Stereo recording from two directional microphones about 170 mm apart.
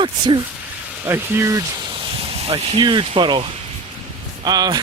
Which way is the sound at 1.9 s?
30° right (ahead or behind).